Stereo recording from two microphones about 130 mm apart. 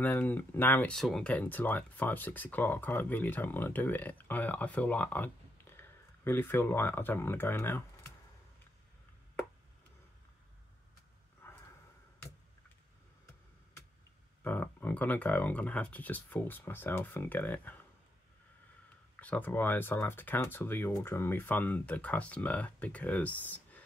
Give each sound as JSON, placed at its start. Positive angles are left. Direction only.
{"t": 0.0, "sound": "speech", "side_deg": 15}
{"t": 0.9, "sound": "speech", "side_deg": 0}
{"t": 11.4, "sound": "a sound", "side_deg": 15}
{"t": 14.4, "sound": "speech", "side_deg": 15}
{"t": 19.1, "sound": "speech", "side_deg": 10}